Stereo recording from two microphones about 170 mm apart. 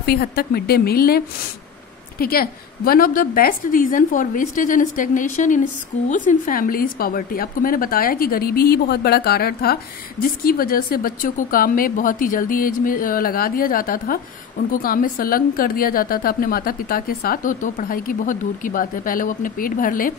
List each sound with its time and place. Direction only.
0.0 s a woman's voice: 65° left (ahead or behind)